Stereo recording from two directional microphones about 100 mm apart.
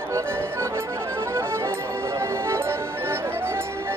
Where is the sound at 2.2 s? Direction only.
25° right (ahead or behind).